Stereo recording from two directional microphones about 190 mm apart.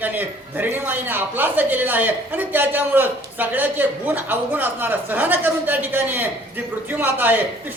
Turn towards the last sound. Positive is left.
turn(degrees=-10)  # may be behind; listen again after turning